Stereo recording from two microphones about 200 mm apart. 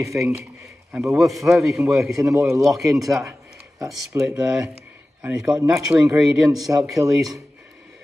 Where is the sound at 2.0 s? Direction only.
15° right (ahead or behind).